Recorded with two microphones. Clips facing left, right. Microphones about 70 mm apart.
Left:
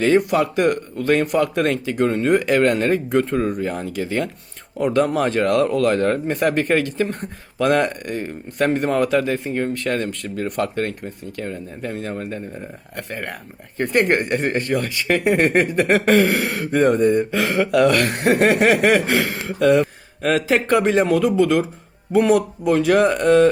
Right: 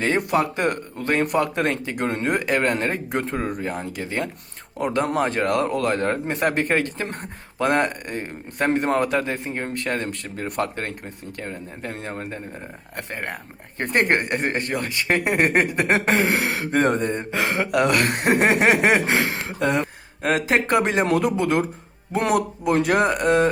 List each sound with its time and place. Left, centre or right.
0.0 s speech: right
2.5 s speech: centre; by 7.2 s right
7.6 s speech: right
16.8 s speech: right
17.3 s speech: right
22.2 s speech: right
22.6 s speech: right